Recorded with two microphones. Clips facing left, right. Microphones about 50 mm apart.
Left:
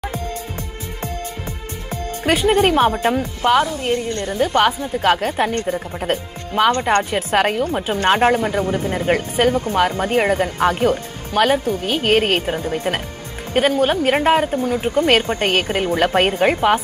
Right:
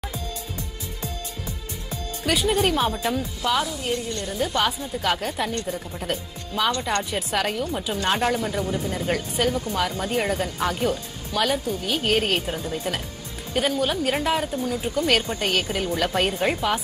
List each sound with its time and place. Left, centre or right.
2.2 s a woman's voice: left